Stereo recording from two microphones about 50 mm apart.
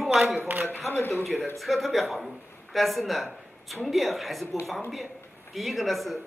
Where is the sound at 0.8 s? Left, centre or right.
Left.